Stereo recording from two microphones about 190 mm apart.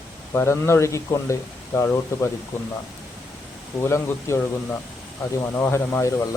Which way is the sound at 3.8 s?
15° left (ahead or behind).